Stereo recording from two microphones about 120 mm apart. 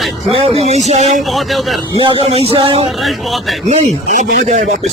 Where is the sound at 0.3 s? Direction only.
60° right (ahead or behind).